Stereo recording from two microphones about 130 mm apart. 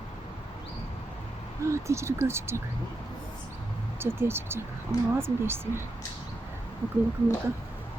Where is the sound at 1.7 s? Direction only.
20° right (ahead or behind).